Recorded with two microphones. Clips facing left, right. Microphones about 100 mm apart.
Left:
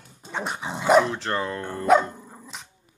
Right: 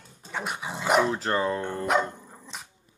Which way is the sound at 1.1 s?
5° right (ahead or behind).